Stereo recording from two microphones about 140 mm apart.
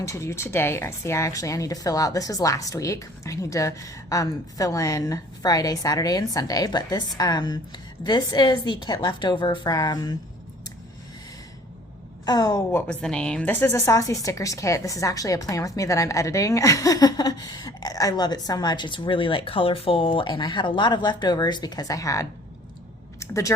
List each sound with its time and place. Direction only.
0.0 s a woman's voice: 20° left (ahead or behind)
12.2 s a woman's voice: 30° left (ahead or behind)
12.7 s a woman's voice: 5° left (ahead or behind)